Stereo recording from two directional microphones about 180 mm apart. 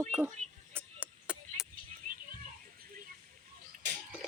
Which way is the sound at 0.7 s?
10° right (ahead or behind).